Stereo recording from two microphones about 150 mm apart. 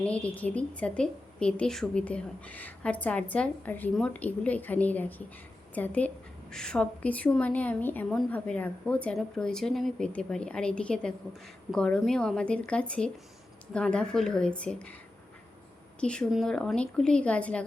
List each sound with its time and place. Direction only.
0.0 s a woman's voice: 10° left (ahead or behind)
16.0 s a woman's voice: 5° left (ahead or behind)